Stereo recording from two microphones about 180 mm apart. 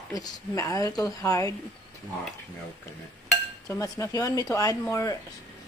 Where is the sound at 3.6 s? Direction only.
20° left (ahead or behind).